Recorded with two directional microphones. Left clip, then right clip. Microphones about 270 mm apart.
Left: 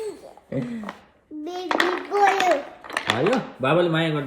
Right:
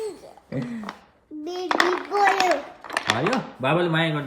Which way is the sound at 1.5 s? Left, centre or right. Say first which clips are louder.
Right 1 dB; centre.